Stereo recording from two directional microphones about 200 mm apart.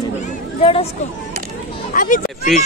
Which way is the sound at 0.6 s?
30° left (ahead or behind).